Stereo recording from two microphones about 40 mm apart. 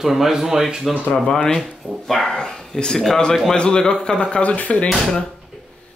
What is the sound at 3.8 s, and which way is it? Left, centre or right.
Speech, centre.